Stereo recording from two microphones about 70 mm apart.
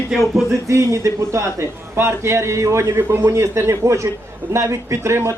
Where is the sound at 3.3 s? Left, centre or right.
Right.